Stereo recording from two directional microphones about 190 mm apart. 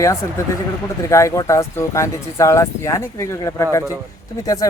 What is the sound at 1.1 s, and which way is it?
Speech, 15° left (ahead or behind).